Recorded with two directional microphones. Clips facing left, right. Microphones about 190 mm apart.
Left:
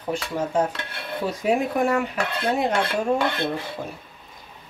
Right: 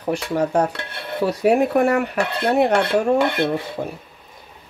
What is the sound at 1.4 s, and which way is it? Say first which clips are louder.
Speech: right 6 dB; 65° right (ahead or behind).